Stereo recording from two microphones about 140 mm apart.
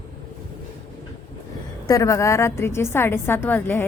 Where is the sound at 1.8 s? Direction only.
25° left (ahead or behind).